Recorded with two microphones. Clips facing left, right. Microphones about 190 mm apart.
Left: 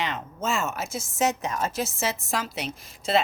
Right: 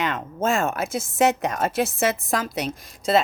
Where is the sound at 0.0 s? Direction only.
50° right (ahead or behind).